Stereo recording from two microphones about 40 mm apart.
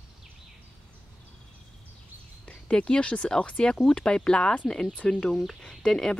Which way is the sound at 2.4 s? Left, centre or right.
Left.